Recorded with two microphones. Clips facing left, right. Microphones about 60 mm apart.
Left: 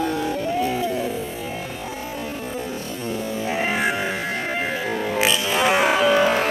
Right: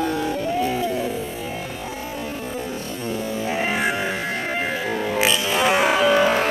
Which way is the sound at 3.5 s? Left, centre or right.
Left.